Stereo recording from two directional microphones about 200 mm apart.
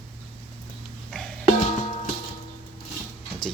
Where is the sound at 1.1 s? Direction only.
Centre (ahead or behind).